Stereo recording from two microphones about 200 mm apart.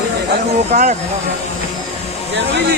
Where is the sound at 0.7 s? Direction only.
40° right (ahead or behind).